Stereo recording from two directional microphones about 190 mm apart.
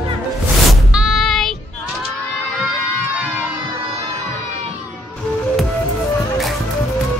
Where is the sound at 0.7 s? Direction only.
Centre (ahead or behind).